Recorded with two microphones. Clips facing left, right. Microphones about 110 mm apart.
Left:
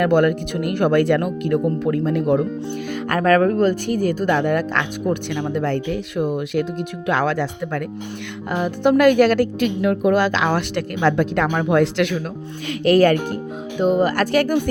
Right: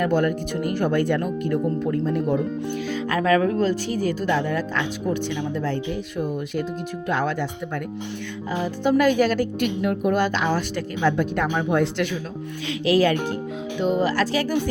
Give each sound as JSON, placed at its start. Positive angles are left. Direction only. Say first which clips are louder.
{"t": 0.0, "sound": "speech", "louder": "left 5 dB", "side_deg": 75}
{"t": 2.9, "sound": "speech", "louder": "left 4 dB", "side_deg": 55}
{"t": 7.1, "sound": "speech", "louder": "left 4 dB", "side_deg": 90}
{"t": 8.4, "sound": "speech", "louder": "left 4 dB", "side_deg": 65}
{"t": 12.6, "sound": "speech", "louder": "left 5 dB", "side_deg": 55}
{"t": 13.7, "sound": "speech", "louder": "left 4 dB", "side_deg": 45}